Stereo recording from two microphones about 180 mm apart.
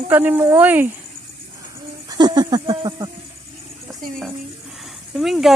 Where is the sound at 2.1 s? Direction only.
25° right (ahead or behind).